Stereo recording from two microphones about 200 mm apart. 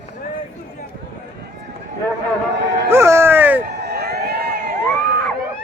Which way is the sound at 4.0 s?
50° right (ahead or behind).